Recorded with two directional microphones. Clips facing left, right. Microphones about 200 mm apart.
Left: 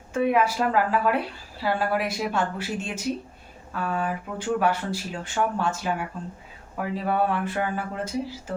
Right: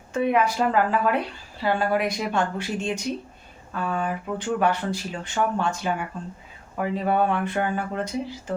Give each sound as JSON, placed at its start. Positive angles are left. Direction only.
{"t": 0.1, "sound": "a woman's voice", "side_deg": 5}